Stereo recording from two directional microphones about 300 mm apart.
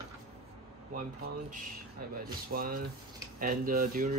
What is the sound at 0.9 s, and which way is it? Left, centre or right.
Speech, right.